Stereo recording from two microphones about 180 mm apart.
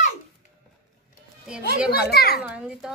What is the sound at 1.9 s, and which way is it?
Children playing, 60° left (ahead or behind).